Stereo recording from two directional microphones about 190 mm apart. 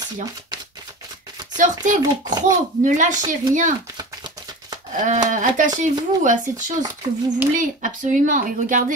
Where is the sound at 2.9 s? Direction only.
40° right (ahead or behind).